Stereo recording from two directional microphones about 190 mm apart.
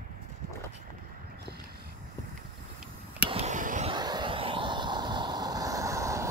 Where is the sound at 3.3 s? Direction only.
35° right (ahead or behind).